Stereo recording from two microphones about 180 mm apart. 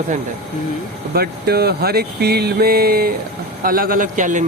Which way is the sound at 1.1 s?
60° right (ahead or behind).